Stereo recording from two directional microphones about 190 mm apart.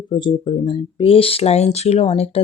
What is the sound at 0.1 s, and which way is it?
Speech, 25° left (ahead or behind).